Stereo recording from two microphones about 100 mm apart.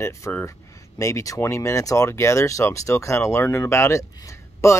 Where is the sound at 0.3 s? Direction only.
25° left (ahead or behind).